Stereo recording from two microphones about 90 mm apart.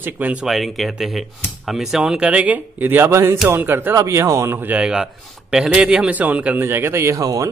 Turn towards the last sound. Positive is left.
turn(degrees=-40)  # may be behind; listen again after turning